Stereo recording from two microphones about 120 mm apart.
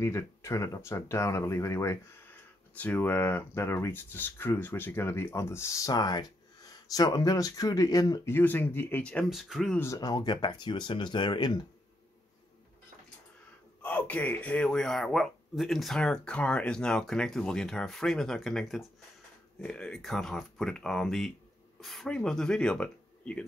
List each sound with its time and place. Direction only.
0.0 s speech: 25° left (ahead or behind)
8.3 s speech: 15° left (ahead or behind)
9.3 s speech: centre (ahead or behind)
9.9 s speech: 30° left (ahead or behind)
13.8 s speech: 10° left (ahead or behind)